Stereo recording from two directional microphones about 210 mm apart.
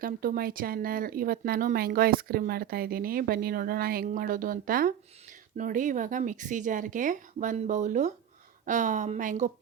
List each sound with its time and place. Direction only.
0.0 s speech: 45° right (ahead or behind)